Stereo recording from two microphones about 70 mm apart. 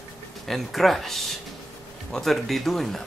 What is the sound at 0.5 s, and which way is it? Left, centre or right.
Speech, centre.